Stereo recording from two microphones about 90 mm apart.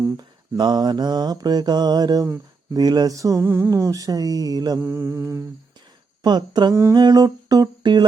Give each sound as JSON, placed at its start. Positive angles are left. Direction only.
{"t": 0.0, "sound": "mantra", "side_deg": -50}
{"t": 3.4, "sound": "mantra", "side_deg": -25}
{"t": 3.7, "sound": "mantra", "side_deg": -35}
{"t": 4.8, "sound": "mantra", "side_deg": -30}
{"t": 6.2, "sound": "mantra", "side_deg": -55}